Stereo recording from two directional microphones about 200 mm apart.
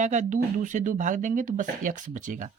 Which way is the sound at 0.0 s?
35° right (ahead or behind).